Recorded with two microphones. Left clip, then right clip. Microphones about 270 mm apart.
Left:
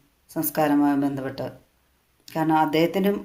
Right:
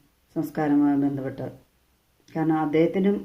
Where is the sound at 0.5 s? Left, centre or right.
Left.